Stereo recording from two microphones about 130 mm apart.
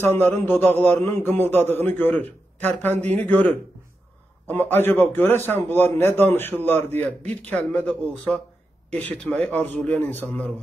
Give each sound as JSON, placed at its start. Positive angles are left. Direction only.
{"t": 0.0, "sound": "a man's voice", "side_deg": 15}